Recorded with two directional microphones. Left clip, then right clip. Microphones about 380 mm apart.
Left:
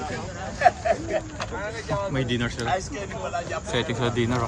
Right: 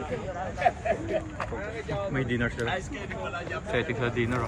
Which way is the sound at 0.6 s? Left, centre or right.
Centre.